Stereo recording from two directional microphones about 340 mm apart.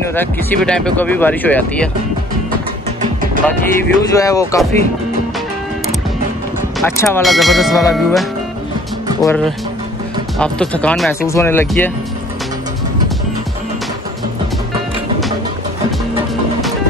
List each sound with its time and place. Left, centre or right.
0.1 s speech: centre
3.0 s music: right
3.4 s speech: centre
6.8 s speech: centre